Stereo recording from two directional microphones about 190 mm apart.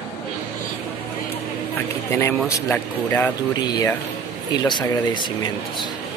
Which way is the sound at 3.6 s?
20° left (ahead or behind).